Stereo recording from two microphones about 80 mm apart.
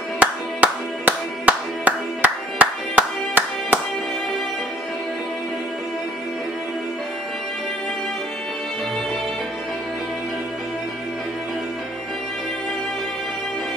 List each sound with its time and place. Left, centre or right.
0.2 s clapping: centre